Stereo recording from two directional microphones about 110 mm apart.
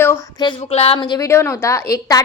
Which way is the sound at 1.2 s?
25° left (ahead or behind).